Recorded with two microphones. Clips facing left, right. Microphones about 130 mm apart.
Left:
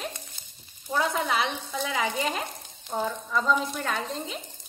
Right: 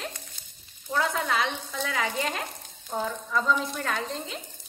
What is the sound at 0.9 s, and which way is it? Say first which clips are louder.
Frying: left 1 dB; 10° left (ahead or behind).